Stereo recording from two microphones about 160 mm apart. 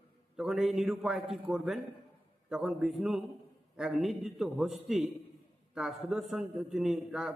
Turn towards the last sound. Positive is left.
turn(degrees=-5)  # may be behind; listen again after turning